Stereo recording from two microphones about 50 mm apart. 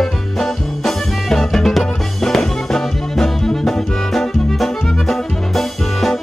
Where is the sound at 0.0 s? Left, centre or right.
Centre.